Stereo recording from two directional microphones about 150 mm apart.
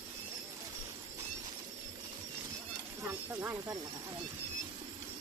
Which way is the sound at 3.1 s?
15° right (ahead or behind).